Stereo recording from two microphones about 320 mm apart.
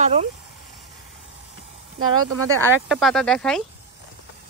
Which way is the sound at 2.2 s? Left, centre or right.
Right.